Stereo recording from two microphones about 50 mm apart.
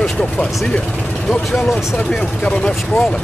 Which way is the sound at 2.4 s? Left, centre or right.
Left.